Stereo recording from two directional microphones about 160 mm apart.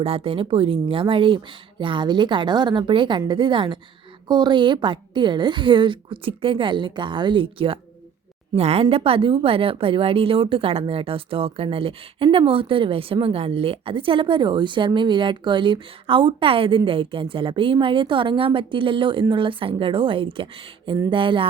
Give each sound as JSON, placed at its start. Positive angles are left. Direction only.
{"t": 0.0, "sound": "a woman's voice", "side_deg": -35}